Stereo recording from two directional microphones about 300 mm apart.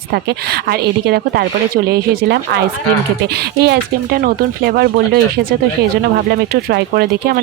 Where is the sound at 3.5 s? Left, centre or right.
Right.